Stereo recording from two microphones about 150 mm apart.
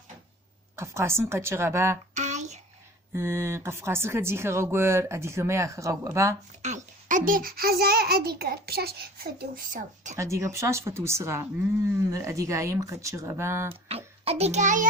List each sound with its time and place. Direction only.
0.8 s speech: 15° right (ahead or behind)
2.1 s a sound: 50° right (ahead or behind)
3.2 s speech: 15° right (ahead or behind)
6.6 s a child's voice: 55° right (ahead or behind); by 9.2 s 90° right
9.7 s speech: 55° right (ahead or behind)
10.2 s speech: 20° right (ahead or behind)
13.8 s a child's voice: 40° right (ahead or behind)